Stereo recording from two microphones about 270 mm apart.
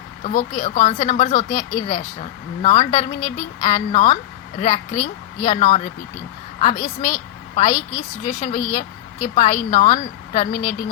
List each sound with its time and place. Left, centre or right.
0.3 s a woman's voice: left